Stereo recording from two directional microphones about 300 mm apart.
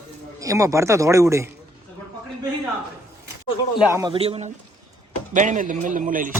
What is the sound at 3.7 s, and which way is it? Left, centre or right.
Speech, centre.